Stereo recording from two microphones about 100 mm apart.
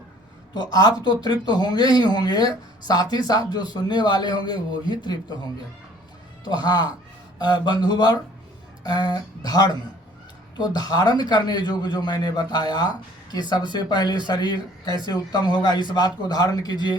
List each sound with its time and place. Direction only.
0.5 s speech: 45° left (ahead or behind)
6.4 s speech: 45° left (ahead or behind)
10.8 s speech: 40° left (ahead or behind)